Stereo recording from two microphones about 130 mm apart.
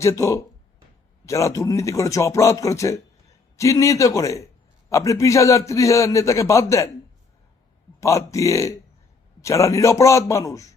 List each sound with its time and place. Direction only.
0.0 s a man's voice: 20° left (ahead or behind)
8.0 s a man's voice: 25° left (ahead or behind)